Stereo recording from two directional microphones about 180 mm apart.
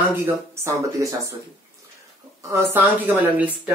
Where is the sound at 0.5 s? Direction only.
15° right (ahead or behind).